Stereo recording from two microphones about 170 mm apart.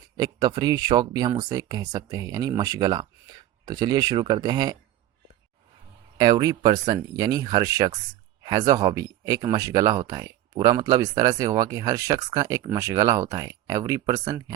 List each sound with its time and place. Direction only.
0.2 s speech: 25° right (ahead or behind)
6.1 s speech: 25° right (ahead or behind)